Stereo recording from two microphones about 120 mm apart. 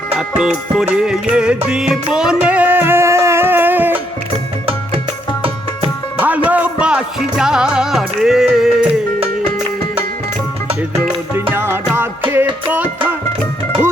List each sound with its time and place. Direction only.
0.2 s music: 5° right (ahead or behind)
6.1 s music: 15° right (ahead or behind)
11.5 s music: 20° right (ahead or behind)